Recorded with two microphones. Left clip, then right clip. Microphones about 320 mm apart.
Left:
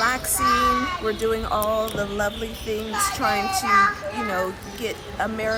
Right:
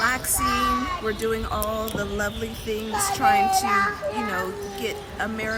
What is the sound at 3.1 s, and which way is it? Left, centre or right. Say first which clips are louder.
Speech: right 6 dB; centre.